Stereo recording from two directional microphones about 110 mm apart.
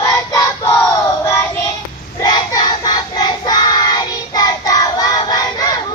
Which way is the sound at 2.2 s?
40° left (ahead or behind).